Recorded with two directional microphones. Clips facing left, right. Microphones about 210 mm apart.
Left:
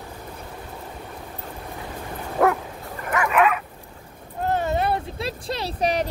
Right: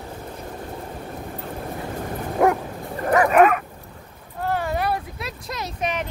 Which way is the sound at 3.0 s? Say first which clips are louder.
Right 5 dB; 35° right (ahead or behind).